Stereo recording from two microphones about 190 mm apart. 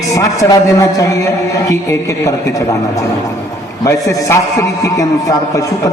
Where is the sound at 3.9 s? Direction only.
15° left (ahead or behind).